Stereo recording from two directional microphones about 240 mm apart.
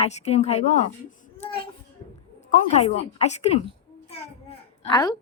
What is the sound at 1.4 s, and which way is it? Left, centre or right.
Child singing, left.